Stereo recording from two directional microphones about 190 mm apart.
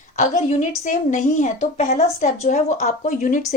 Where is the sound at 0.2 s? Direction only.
40° left (ahead or behind).